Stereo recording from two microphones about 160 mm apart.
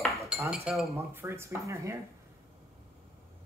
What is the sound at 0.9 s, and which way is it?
Speech, 15° right (ahead or behind).